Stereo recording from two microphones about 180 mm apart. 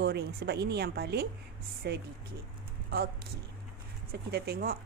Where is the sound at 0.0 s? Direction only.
65° right (ahead or behind).